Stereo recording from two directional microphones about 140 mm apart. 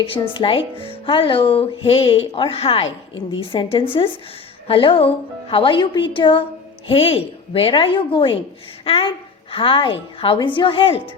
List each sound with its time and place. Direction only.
0.3 s speech: 40° left (ahead or behind)